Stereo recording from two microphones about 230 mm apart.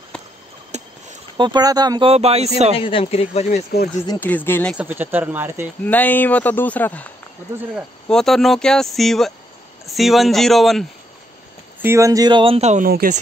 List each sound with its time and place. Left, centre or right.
0.7 s a sound: right
1.3 s speech: centre
2.8 s speech: left
4.1 s speech: centre
4.7 s speech: centre
5.9 s speech: centre
11.8 s speech: centre; by 13.2 s right